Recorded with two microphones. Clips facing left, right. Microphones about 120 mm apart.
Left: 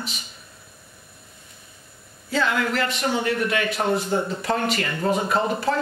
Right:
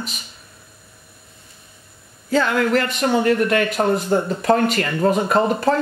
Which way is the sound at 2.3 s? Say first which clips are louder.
Right 6 dB; 50° right (ahead or behind).